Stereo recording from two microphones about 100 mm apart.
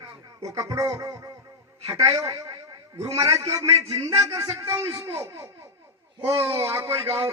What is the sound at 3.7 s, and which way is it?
Speech, 85° right.